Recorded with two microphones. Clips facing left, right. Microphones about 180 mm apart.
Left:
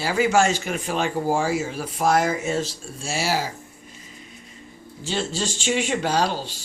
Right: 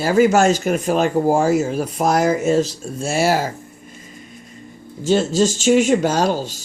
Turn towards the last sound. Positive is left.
turn(degrees=-45)  # may be behind; listen again after turning